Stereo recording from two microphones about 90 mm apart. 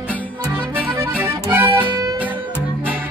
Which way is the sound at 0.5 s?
20° right (ahead or behind).